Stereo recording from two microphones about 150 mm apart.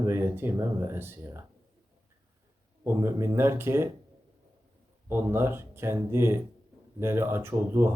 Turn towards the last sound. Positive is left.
turn(degrees=-15)  # may be behind; listen again after turning